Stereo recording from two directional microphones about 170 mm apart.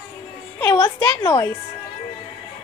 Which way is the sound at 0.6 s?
15° left (ahead or behind).